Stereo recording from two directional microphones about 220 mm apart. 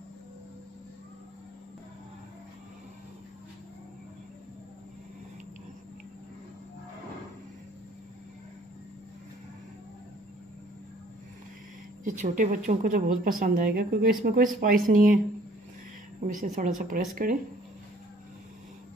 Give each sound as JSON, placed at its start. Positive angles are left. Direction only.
{"t": 12.0, "sound": "speech", "side_deg": -35}
{"t": 16.3, "sound": "speech", "side_deg": -35}